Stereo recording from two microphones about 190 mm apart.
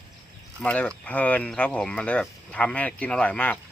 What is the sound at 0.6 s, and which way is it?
Speech, 5° left (ahead or behind).